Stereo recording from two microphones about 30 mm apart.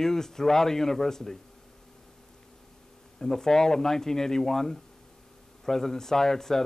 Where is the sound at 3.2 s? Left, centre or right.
Centre.